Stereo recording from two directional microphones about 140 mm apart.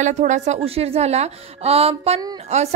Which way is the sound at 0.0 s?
60° right (ahead or behind).